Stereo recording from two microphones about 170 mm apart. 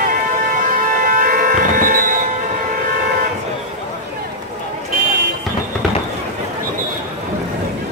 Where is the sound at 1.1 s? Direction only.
55° right (ahead or behind).